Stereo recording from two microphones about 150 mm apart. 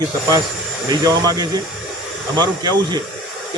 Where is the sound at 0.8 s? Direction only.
25° right (ahead or behind).